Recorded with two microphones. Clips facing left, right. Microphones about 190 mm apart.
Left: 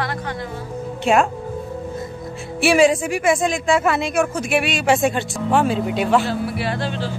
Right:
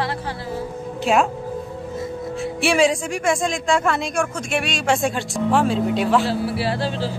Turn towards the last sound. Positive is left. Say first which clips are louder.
# right 1 dB
turn(degrees=-35)  # may be behind; listen again after turning